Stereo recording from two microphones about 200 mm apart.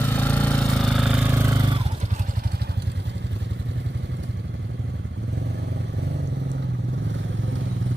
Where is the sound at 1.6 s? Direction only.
25° right (ahead or behind); by 4.2 s 65° right (ahead or behind).